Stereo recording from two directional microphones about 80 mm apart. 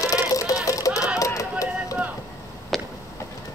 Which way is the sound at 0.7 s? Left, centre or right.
Left.